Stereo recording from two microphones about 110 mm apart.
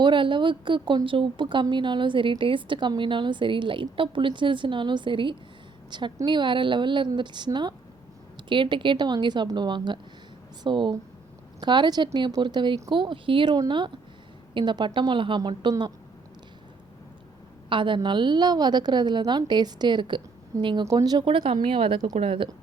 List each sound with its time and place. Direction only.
0.0 s a woman's voice: 45° right (ahead or behind)
17.7 s a woman's voice: 50° right (ahead or behind)
21.2 s a woman's voice: 50° right (ahead or behind)